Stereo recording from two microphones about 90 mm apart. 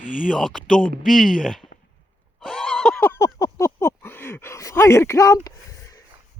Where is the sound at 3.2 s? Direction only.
35° left (ahead or behind).